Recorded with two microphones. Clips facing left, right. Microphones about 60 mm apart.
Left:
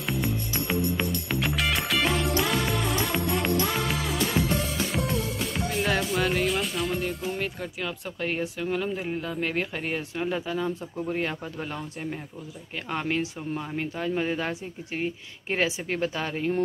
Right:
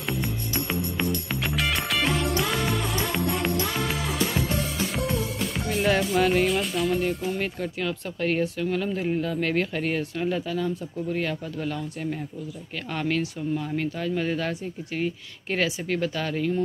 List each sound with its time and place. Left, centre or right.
0.1 s music: centre
4.9 s speech: centre; by 16.5 s left